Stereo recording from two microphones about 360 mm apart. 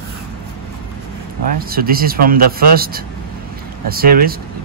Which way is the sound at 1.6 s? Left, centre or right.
Right.